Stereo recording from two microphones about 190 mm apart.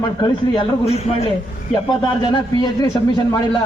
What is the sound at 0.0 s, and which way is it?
A man's voice, 25° left (ahead or behind).